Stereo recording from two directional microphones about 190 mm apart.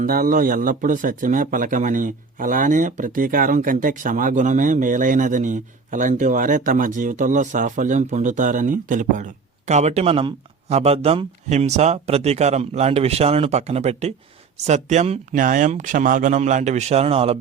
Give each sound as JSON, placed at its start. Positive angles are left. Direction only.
{"t": 0.0, "sound": "a man's voice", "side_deg": -45}